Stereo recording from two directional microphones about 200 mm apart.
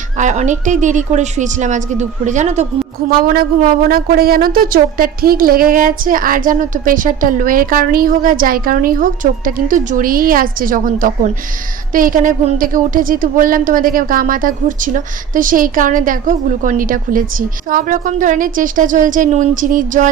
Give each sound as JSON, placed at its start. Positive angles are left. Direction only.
{"t": 0.2, "sound": "a woman's voice", "side_deg": -40}
{"t": 3.1, "sound": "a woman's voice", "side_deg": -45}